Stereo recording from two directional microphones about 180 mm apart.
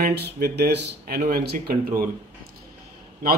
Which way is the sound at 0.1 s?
65° right (ahead or behind).